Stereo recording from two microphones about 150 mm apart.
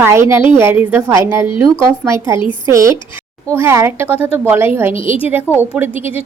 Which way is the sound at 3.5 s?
15° right (ahead or behind).